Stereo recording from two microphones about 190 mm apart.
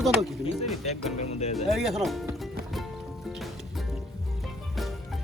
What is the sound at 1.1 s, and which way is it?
Speech, 35° left (ahead or behind).